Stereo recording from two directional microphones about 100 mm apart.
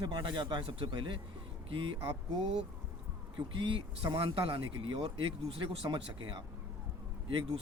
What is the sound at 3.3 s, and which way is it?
Speech, 55° right (ahead or behind).